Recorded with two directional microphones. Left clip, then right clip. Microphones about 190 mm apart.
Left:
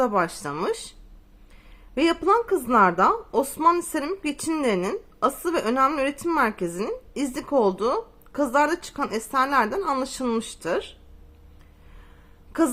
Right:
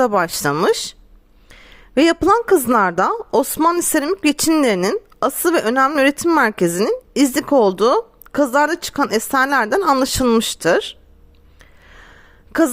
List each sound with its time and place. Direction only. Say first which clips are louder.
0.0 s a woman's voice: right 7 dB; 50° right (ahead or behind)
2.0 s a woman's voice: right 7 dB; 45° right (ahead or behind)
12.5 s a sound: right 7 dB; 45° right (ahead or behind)